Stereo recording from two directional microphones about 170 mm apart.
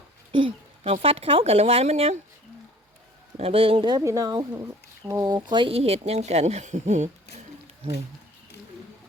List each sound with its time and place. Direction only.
0.3 s a sound: 30° right (ahead or behind)
1.0 s speech: 35° right (ahead or behind)
3.3 s speech: 35° right (ahead or behind)